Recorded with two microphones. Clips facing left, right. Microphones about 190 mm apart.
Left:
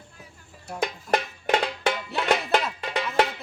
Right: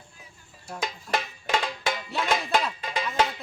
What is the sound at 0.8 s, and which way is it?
Music, 60° left (ahead or behind).